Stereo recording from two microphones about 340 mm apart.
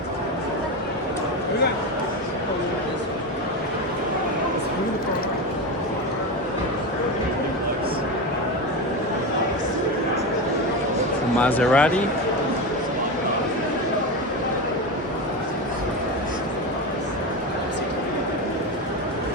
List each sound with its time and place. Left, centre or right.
11.3 s speech: centre